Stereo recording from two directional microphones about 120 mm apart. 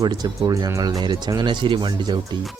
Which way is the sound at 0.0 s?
35° right (ahead or behind).